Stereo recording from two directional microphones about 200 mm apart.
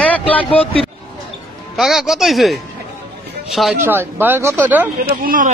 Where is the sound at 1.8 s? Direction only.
Centre (ahead or behind).